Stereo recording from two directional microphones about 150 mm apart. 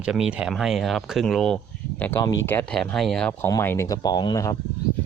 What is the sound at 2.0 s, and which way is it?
Speech, 15° left (ahead or behind).